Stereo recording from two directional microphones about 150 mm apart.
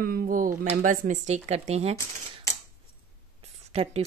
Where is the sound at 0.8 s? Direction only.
60° right (ahead or behind).